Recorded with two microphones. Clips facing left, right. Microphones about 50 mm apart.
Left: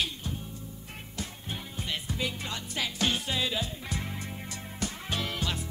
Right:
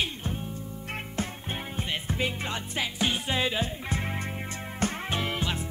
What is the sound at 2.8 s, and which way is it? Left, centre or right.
Music, centre.